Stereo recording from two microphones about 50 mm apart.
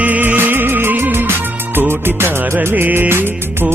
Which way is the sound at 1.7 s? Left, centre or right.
Right.